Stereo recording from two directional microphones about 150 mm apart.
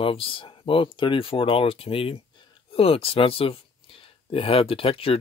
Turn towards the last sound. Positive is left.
turn(degrees=40)  # may be behind; listen again after turning